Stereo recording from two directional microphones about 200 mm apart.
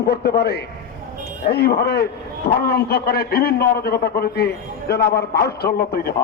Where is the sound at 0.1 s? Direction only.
55° left (ahead or behind).